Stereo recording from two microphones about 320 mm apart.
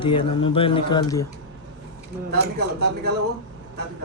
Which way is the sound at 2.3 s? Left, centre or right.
Right.